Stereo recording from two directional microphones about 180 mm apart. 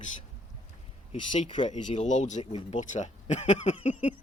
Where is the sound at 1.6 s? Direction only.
40° left (ahead or behind).